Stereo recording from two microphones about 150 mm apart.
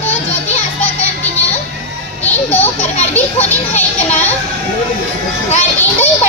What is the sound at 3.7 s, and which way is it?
Music, 50° left (ahead or behind).